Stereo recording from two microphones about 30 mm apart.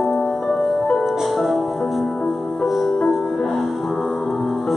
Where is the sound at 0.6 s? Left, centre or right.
Centre.